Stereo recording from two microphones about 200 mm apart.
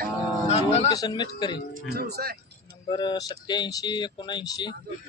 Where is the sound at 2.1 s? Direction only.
50° right (ahead or behind).